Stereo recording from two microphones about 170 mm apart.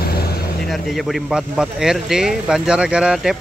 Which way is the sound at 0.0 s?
65° left (ahead or behind).